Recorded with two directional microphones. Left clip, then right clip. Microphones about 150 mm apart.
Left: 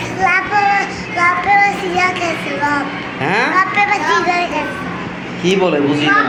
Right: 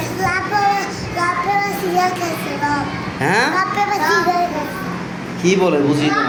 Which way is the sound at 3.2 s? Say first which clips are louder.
Even; 15° right (ahead or behind).